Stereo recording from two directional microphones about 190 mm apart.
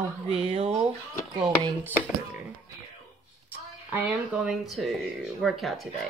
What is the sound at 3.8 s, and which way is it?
Speech, 10° right (ahead or behind).